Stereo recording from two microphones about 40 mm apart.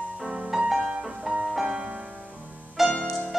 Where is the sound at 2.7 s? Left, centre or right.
Centre.